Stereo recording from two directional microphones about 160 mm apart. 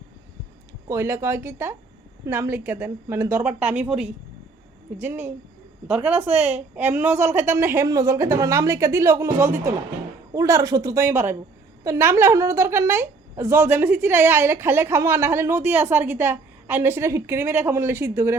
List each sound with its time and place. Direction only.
0.9 s a woman's voice: 15° right (ahead or behind)